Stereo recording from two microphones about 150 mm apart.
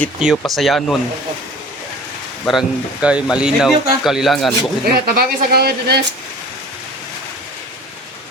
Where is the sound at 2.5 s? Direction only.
5° right (ahead or behind).